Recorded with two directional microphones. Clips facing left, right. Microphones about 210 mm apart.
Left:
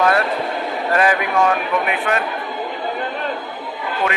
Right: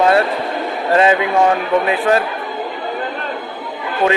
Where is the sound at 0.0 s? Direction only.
25° right (ahead or behind).